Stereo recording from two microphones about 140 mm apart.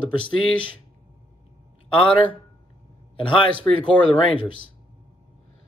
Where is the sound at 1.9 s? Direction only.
40° left (ahead or behind).